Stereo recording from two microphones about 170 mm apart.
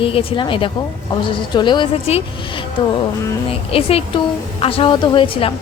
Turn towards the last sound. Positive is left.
turn(degrees=30)  # may be behind; listen again after turning